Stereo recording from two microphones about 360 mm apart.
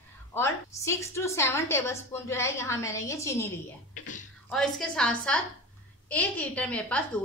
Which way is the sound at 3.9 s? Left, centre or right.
Left.